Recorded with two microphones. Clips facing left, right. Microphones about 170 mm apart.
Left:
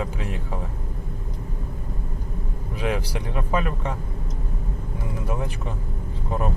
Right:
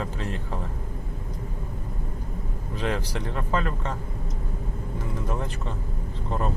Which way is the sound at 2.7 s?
10° left (ahead or behind).